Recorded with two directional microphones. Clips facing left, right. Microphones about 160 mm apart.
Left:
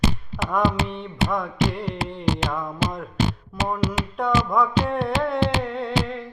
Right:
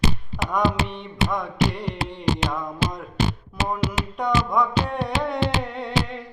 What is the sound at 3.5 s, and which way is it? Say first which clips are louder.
Music: left 3 dB; centre (ahead or behind).